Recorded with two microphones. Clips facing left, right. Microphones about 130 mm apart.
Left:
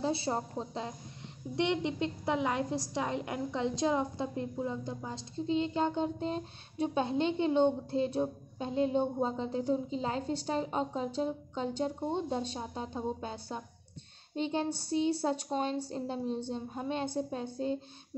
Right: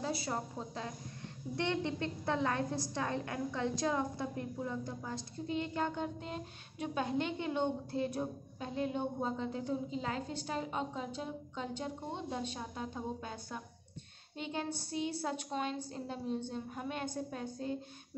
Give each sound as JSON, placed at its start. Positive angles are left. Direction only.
{"t": 0.0, "sound": "a woman's voice", "side_deg": 30}